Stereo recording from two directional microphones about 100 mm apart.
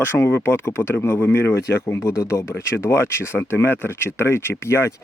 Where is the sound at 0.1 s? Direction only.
25° left (ahead or behind).